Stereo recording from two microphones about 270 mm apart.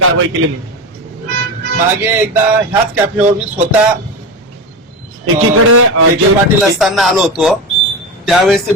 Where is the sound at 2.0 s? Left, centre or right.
Centre.